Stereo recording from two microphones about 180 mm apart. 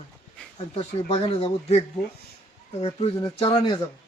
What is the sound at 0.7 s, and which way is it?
Speech, 35° left (ahead or behind).